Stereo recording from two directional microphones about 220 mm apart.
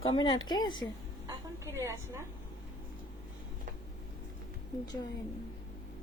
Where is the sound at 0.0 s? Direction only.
20° left (ahead or behind).